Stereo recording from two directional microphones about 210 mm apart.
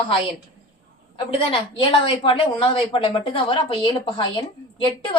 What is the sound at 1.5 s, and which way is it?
A woman's voice, 25° left (ahead or behind).